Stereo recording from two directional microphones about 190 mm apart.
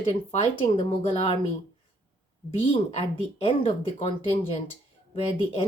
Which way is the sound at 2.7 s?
30° left (ahead or behind).